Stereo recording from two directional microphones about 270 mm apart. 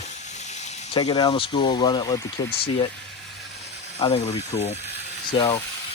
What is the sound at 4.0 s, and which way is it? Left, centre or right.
Speech, left.